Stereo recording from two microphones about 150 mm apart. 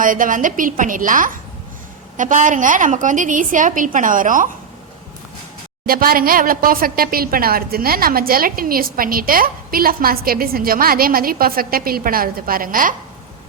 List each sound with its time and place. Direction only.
0.0 s a woman's voice: 65° right (ahead or behind)
5.8 s a woman's voice: 75° right (ahead or behind)